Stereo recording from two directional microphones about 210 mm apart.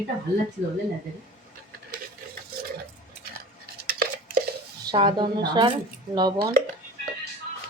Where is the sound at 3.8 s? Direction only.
45° right (ahead or behind).